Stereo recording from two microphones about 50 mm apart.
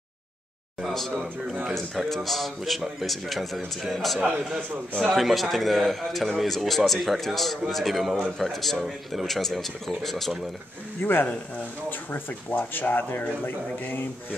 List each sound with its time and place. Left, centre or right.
0.7 s a man's voice: centre
11.0 s speech: left